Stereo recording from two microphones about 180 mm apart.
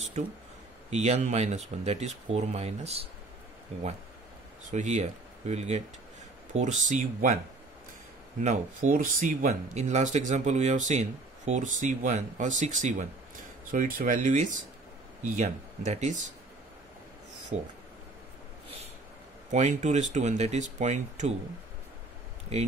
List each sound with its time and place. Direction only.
0.8 s speech: 40° right (ahead or behind)
8.4 s speech: 45° right (ahead or behind)
19.5 s speech: 40° right (ahead or behind)
22.5 s speech: 35° right (ahead or behind)